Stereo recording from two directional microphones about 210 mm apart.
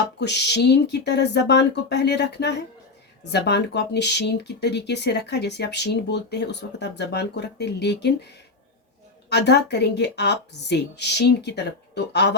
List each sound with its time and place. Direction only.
0.2 s speech: 55° left (ahead or behind)
9.3 s speech: 55° left (ahead or behind)